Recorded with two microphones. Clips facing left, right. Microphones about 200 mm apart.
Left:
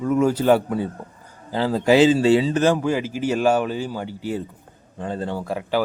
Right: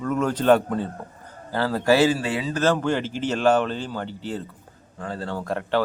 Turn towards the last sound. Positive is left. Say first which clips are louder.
# left 1 dB
turn(degrees=5)  # may be behind; listen again after turning